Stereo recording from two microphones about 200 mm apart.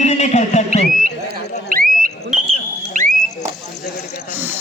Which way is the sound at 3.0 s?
40° right (ahead or behind).